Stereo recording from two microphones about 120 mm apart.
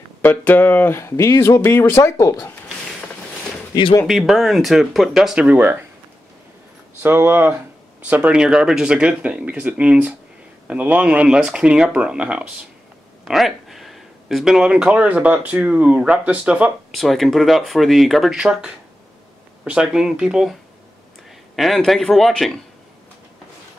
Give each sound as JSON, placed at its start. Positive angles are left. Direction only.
{"t": 0.2, "sound": "speech", "side_deg": 15}
{"t": 4.1, "sound": "speech", "side_deg": 0}
{"t": 7.0, "sound": "speech", "side_deg": -20}
{"t": 21.5, "sound": "speech", "side_deg": 0}